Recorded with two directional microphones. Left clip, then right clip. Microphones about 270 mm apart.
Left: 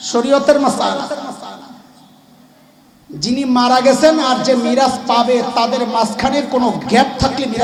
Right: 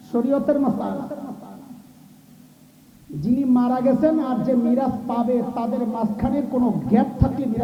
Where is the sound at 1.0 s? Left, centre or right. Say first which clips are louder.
Left 10 dB; centre.